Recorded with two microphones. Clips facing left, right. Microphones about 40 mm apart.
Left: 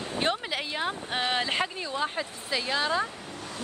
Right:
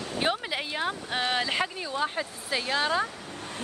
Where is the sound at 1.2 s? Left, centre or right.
Centre.